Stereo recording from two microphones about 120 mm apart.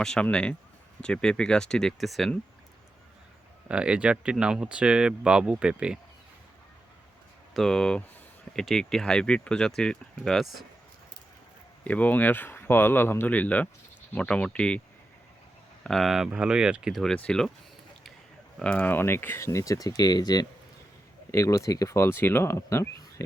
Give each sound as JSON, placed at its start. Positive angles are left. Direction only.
{"t": 0.0, "sound": "speech", "side_deg": 5}
{"t": 3.7, "sound": "speech", "side_deg": -10}
{"t": 7.5, "sound": "speech", "side_deg": 5}
{"t": 11.9, "sound": "speech", "side_deg": 15}
{"t": 15.8, "sound": "speech", "side_deg": 0}
{"t": 18.6, "sound": "speech", "side_deg": 10}